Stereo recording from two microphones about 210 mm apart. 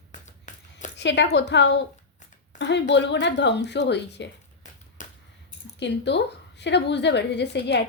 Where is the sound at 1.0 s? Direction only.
55° left (ahead or behind).